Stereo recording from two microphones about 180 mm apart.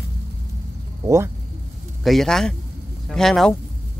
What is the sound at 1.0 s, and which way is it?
Speech, 15° right (ahead or behind).